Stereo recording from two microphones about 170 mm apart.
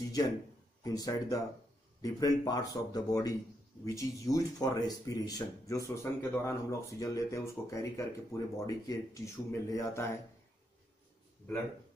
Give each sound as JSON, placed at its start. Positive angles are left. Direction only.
{"t": 0.8, "sound": "speech", "side_deg": 20}